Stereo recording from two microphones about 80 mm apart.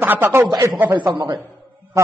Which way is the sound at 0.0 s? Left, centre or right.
Right.